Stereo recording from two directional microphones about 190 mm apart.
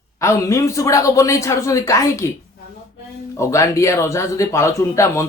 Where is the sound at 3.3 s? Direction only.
15° left (ahead or behind).